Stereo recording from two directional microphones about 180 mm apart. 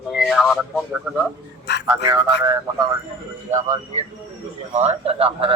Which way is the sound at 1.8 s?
20° right (ahead or behind).